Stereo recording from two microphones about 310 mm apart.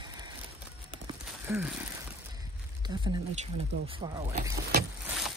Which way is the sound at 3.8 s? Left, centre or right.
Centre.